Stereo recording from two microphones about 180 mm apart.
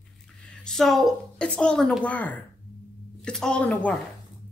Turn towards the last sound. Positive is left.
turn(degrees=5)  # may be behind; listen again after turning